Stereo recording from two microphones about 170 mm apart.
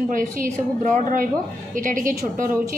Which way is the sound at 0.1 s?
50° right (ahead or behind).